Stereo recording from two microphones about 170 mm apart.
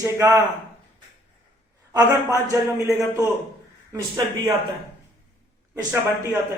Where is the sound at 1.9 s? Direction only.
20° right (ahead or behind).